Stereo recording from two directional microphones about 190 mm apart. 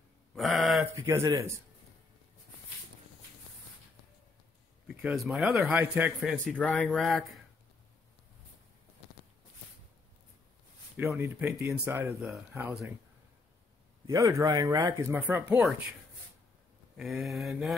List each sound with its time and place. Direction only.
0.3 s a sound: centre (ahead or behind)
1.0 s speech: 20° right (ahead or behind)
4.8 s a man's voice: centre (ahead or behind)
6.3 s a man's voice: 5° left (ahead or behind)
11.1 s speech: 10° right (ahead or behind)
14.0 s speech: 15° right (ahead or behind)
16.9 s a man's voice: 5° right (ahead or behind)